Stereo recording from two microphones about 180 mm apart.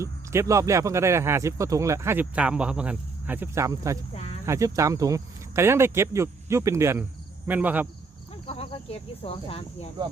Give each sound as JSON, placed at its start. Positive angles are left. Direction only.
{"t": 0.0, "sound": "speech", "side_deg": -15}
{"t": 4.1, "sound": "cricket", "side_deg": 35}
{"t": 4.4, "sound": "speech", "side_deg": -15}
{"t": 8.4, "sound": "speech", "side_deg": 30}